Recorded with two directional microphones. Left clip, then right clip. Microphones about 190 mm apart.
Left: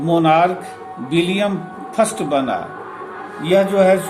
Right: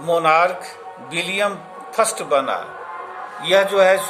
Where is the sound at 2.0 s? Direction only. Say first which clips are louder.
Left 1 dB; 45° right (ahead or behind).